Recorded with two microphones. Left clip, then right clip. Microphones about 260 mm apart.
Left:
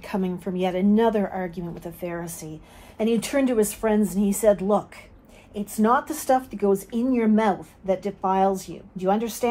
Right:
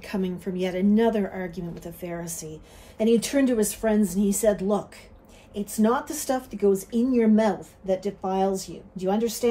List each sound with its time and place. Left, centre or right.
0.0 s a woman's voice: centre